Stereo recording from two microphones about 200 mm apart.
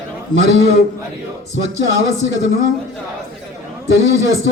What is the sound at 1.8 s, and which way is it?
Speech, 75° right (ahead or behind).